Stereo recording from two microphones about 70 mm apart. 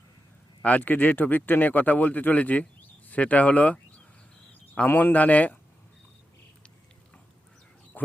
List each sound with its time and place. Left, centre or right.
0.6 s speech: left
4.9 s speech: left
7.9 s a sound: left